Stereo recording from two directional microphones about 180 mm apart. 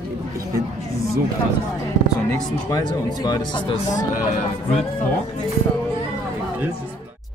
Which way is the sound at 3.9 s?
45° left (ahead or behind).